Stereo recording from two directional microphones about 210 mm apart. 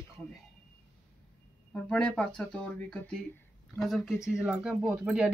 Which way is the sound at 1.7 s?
5° left (ahead or behind).